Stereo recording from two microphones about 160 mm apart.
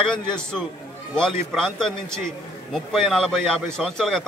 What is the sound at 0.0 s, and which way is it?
A man's voice, 5° left (ahead or behind).